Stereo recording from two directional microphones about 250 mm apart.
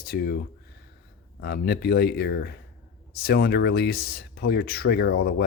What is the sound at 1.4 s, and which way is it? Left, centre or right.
Speech, left.